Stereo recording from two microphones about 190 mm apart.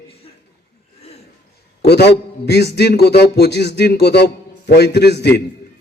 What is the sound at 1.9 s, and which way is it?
A man's voice, 60° left (ahead or behind).